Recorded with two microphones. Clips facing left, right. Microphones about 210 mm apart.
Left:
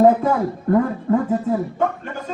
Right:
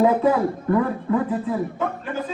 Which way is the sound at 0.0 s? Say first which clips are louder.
Left 2 dB; 45° left (ahead or behind).